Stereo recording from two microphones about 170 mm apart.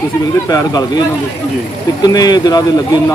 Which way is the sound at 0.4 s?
20° left (ahead or behind).